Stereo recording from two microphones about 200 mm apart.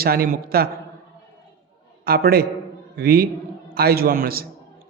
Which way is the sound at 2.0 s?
50° right (ahead or behind).